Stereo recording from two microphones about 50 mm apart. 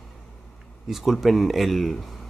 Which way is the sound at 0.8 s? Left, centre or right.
Centre.